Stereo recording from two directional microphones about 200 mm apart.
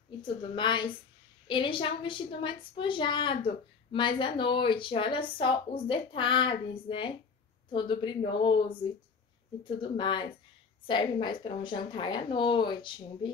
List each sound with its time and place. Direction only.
0.2 s a woman's voice: 25° left (ahead or behind)